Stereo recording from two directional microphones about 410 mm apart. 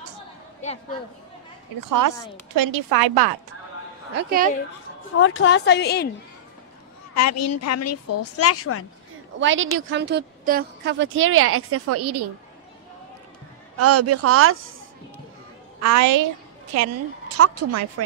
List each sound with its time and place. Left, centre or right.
1.8 s a woman's voice: right
4.1 s a woman's voice: right
5.2 s a woman's voice: left
7.2 s a woman's voice: left
9.4 s a woman's voice: right
13.7 s speech: right
15.8 s a woman's voice: right
17.4 s speech: right